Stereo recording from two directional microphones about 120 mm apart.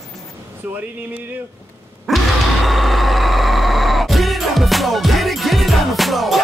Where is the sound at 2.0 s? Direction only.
Centre (ahead or behind).